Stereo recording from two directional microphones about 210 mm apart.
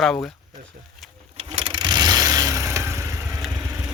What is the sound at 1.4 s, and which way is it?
Vehicle, 25° right (ahead or behind).